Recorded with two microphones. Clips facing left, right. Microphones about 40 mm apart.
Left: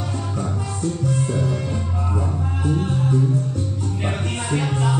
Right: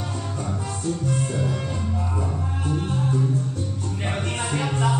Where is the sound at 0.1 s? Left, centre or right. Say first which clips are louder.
Left 3 dB; centre.